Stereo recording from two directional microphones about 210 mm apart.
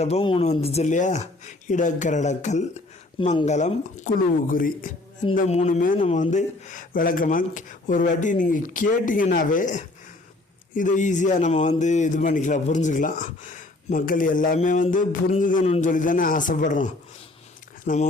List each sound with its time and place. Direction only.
0.0 s a man's voice: 30° left (ahead or behind)